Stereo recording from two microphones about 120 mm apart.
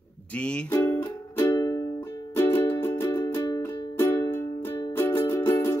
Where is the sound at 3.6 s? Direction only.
20° left (ahead or behind).